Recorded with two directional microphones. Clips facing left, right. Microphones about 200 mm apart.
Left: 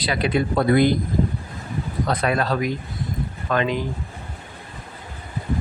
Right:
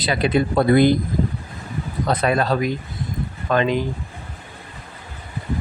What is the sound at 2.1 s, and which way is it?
Speech, 25° right (ahead or behind).